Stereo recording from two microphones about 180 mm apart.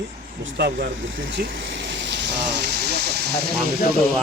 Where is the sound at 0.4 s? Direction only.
65° right (ahead or behind).